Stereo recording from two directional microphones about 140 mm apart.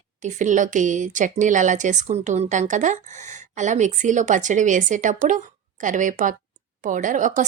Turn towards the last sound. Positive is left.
turn(degrees=-65)  # may be behind; listen again after turning